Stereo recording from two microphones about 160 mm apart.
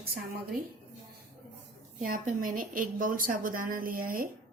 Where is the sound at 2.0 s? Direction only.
60° right (ahead or behind).